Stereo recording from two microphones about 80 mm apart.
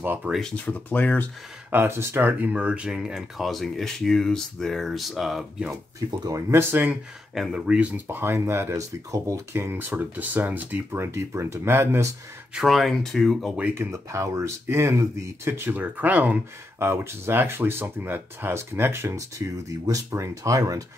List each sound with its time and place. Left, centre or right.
0.0 s speech: right
0.7 s speech: left
1.7 s speech: right; by 5.4 s centre
6.0 s speech: right
6.5 s speech: right
7.3 s speech: centre
8.1 s speech: right
11.0 s speech: right
12.5 s speech: centre
13.7 s speech: right